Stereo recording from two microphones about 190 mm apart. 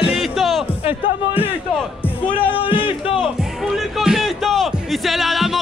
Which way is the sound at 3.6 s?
Centre (ahead or behind).